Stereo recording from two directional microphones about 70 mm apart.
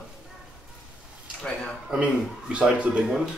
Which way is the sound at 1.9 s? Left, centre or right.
Centre.